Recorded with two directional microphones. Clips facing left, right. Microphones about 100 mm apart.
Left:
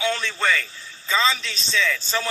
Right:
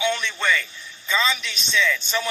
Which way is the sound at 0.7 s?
30° left (ahead or behind).